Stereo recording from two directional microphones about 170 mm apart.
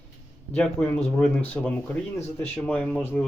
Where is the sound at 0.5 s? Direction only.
10° left (ahead or behind).